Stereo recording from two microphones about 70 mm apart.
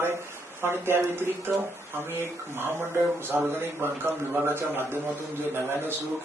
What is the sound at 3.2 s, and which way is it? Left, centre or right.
A man's voice, right.